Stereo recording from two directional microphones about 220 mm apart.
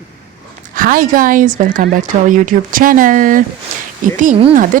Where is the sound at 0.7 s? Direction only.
40° right (ahead or behind).